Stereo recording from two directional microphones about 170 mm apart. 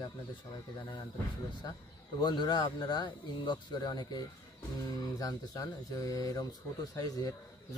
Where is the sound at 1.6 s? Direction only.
20° left (ahead or behind).